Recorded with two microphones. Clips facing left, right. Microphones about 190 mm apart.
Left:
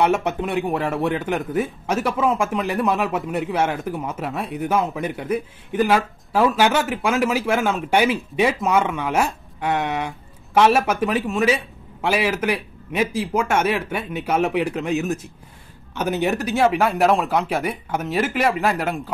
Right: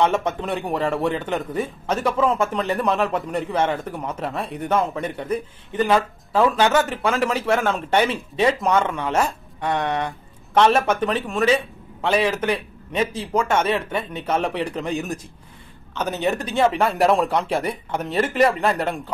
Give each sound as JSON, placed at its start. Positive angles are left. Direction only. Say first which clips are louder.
{"t": 0.0, "sound": "a man's voice", "louder": "left 1 dB", "side_deg": 10}